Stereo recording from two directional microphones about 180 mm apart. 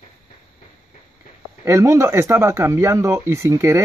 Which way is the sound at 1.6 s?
15° right (ahead or behind).